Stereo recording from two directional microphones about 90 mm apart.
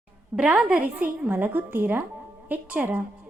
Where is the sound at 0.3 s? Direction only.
15° right (ahead or behind).